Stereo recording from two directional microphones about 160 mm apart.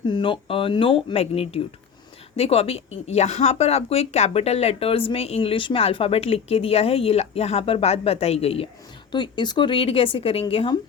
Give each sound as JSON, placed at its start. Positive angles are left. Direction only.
{"t": 0.1, "sound": "speech", "side_deg": 30}
{"t": 9.1, "sound": "speech", "side_deg": 30}